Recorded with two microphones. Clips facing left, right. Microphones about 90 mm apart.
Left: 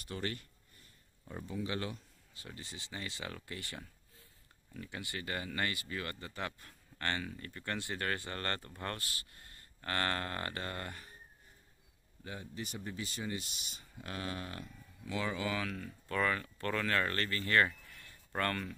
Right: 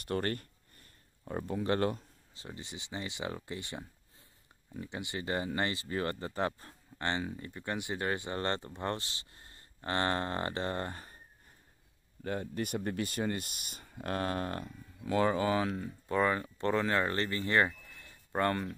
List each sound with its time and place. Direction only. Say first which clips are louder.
0.0 s speech: right 7 dB; 55° right (ahead or behind)
2.3 s speech: right 4 dB; 25° right (ahead or behind)
7.0 s speech: right 4 dB; 20° right (ahead or behind)
12.2 s speech: right 9 dB; 55° right (ahead or behind); by 18.8 s 20° right (ahead or behind)